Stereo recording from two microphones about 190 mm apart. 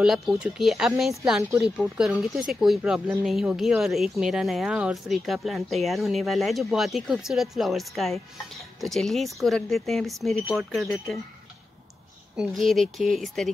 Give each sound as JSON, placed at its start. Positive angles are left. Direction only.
{"t": 0.0, "sound": "speech", "side_deg": -5}
{"t": 12.4, "sound": "speech", "side_deg": 0}